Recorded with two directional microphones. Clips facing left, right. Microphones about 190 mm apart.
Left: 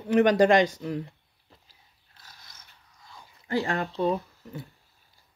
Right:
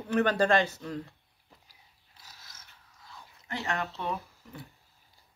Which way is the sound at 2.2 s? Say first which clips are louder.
Left 1 dB; 5° right (ahead or behind).